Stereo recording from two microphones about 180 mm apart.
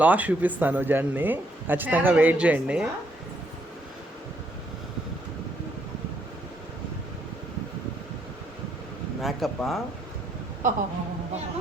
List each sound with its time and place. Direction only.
0.0 s speech: 10° right (ahead or behind)
9.2 s speech: centre (ahead or behind)
10.6 s speech: 45° right (ahead or behind)